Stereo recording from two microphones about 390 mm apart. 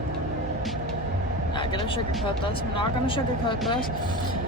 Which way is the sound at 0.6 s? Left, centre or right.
Centre.